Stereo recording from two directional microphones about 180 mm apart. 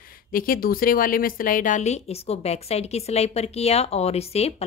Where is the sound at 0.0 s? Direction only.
50° left (ahead or behind).